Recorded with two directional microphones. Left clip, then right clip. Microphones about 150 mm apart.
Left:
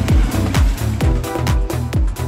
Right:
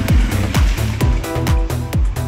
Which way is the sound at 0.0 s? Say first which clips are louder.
Even; centre (ahead or behind).